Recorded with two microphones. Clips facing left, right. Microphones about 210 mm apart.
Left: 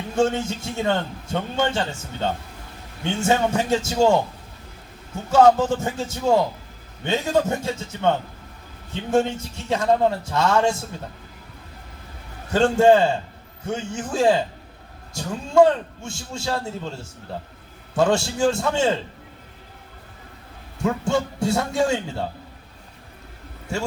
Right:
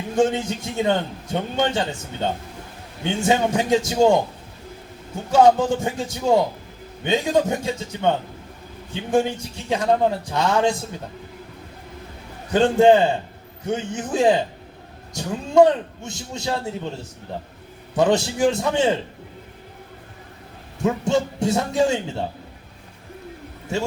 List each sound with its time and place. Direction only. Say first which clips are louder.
0.2 s a man's voice: right 1 dB; 15° right (ahead or behind)
12.5 s a man's voice: right 1 dB; 15° right (ahead or behind)
20.8 s a man's voice: right 2 dB; 20° right (ahead or behind)